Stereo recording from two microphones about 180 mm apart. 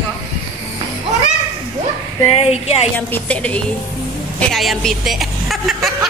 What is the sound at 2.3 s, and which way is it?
Speech, 35° left (ahead or behind).